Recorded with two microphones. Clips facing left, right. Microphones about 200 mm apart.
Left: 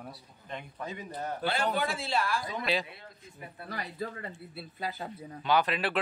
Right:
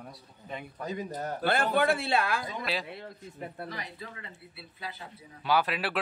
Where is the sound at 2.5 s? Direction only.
Centre (ahead or behind).